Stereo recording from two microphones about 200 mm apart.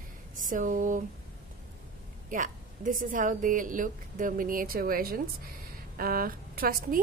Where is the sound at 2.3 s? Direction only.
40° right (ahead or behind).